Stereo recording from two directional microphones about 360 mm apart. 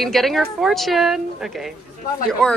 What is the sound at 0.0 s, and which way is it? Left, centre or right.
Speech, centre.